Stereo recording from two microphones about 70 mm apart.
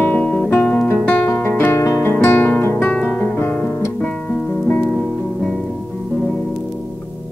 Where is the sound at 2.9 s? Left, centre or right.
Centre.